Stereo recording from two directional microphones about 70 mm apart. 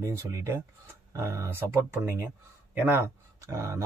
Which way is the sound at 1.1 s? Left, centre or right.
Right.